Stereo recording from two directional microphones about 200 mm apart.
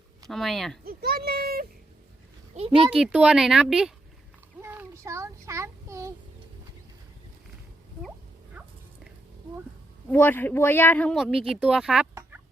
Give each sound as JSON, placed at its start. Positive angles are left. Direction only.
{"t": 0.3, "sound": "speech", "side_deg": 0}
{"t": 0.9, "sound": "speech", "side_deg": -50}
{"t": 2.6, "sound": "speech", "side_deg": -30}
{"t": 2.9, "sound": "speech", "side_deg": -5}
{"t": 4.6, "sound": "child singing", "side_deg": -10}
{"t": 10.1, "sound": "speech", "side_deg": 10}